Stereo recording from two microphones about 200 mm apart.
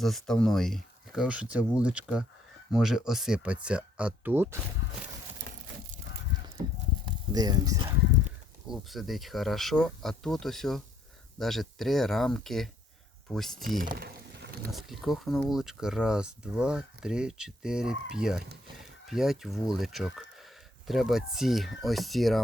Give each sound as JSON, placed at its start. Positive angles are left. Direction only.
{"t": 0.0, "sound": "speech", "side_deg": 0}
{"t": 7.0, "sound": "speech", "side_deg": -20}
{"t": 8.6, "sound": "speech", "side_deg": 0}
{"t": 14.8, "sound": "speech", "side_deg": 0}